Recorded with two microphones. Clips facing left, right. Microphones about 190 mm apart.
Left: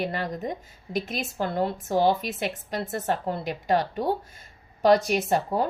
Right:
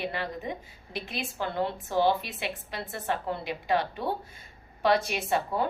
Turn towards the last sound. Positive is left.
turn(degrees=40)  # may be behind; listen again after turning